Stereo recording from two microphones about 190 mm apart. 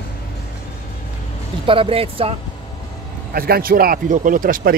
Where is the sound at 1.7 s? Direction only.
30° right (ahead or behind).